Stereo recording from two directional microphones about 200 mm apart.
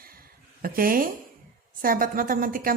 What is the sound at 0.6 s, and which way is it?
A woman's voice, 45° right (ahead or behind).